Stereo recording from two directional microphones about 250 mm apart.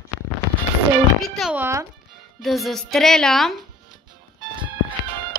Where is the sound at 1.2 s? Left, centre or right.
Centre.